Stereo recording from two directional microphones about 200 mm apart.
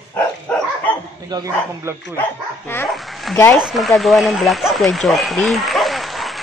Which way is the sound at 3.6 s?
Centre (ahead or behind).